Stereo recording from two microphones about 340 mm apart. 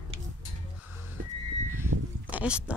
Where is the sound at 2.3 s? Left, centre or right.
Centre.